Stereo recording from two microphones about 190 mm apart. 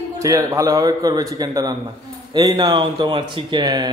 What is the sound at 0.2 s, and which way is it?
A man's voice, 15° right (ahead or behind).